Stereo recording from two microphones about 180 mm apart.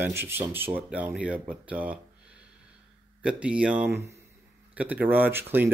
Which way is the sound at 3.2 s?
5° right (ahead or behind).